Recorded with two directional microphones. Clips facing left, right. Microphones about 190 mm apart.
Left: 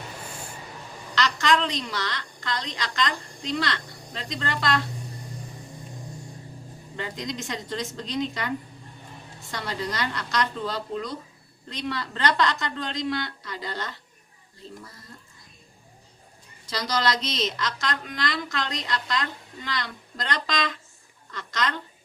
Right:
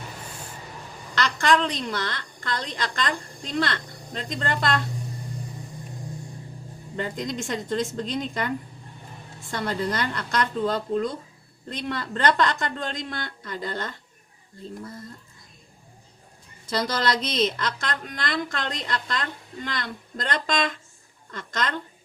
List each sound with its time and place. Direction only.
1.1 s a woman's voice: 50° right (ahead or behind)
6.9 s a woman's voice: 45° right (ahead or behind)
9.5 s a woman's voice: 50° right (ahead or behind)
16.6 s a woman's voice: 50° right (ahead or behind)